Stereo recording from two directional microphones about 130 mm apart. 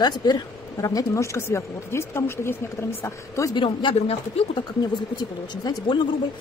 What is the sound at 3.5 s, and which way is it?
Speech, 40° left (ahead or behind).